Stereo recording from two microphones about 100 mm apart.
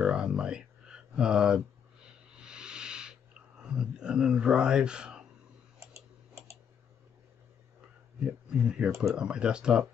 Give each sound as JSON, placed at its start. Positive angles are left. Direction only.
{"t": 0.0, "sound": "a sound", "side_deg": -10}
{"t": 5.8, "sound": "tick-tock", "side_deg": -30}
{"t": 8.2, "sound": "speech", "side_deg": -10}